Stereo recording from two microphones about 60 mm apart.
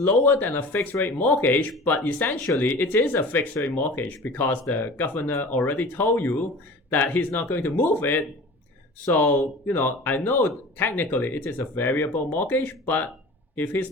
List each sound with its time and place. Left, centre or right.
0.0 s speech: left